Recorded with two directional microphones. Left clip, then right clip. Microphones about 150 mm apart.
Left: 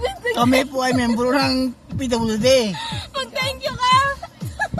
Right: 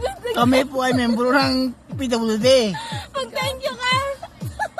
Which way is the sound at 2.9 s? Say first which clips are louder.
Even; 35° right (ahead or behind).